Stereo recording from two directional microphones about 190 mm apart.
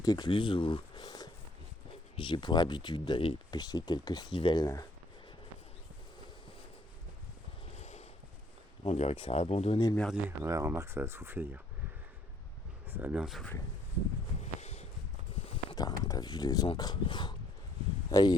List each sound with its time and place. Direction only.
0.0 s speech: 20° left (ahead or behind)
7.8 s a sound: 35° left (ahead or behind)
8.8 s speech: 35° left (ahead or behind)
9.9 s speech: 5° left (ahead or behind)
10.2 s speech: 15° right (ahead or behind)
12.9 s speech: 10° right (ahead or behind)
14.4 s a sound: 35° left (ahead or behind)
16.0 s speech: 20° left (ahead or behind)